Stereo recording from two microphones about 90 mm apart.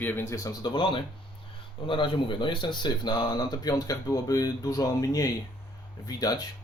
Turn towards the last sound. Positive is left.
turn(degrees=45)  # may be behind; listen again after turning